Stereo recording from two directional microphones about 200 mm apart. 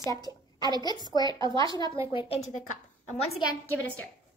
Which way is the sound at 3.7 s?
5° left (ahead or behind).